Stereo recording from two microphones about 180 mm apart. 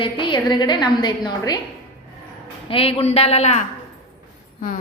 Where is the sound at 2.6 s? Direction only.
30° left (ahead or behind).